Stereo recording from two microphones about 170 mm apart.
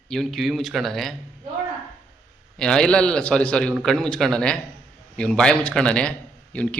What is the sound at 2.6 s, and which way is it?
A man's voice, 5° left (ahead or behind).